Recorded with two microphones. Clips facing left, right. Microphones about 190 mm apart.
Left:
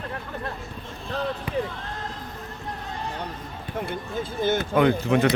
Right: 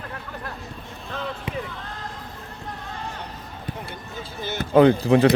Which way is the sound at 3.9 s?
50° left (ahead or behind).